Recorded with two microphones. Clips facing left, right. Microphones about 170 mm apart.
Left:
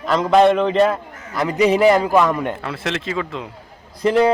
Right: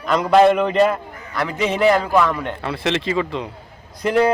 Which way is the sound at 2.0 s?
15° left (ahead or behind).